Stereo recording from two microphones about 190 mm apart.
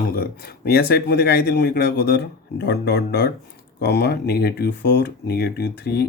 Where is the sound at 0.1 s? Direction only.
55° left (ahead or behind).